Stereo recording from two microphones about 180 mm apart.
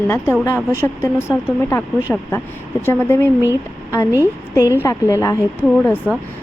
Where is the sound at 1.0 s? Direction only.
15° left (ahead or behind).